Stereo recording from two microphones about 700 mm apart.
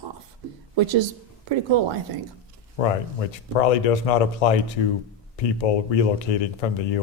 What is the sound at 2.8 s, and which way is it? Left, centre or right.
Speech, left.